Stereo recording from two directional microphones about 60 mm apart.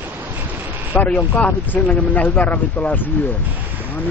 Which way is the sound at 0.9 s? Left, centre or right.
Left.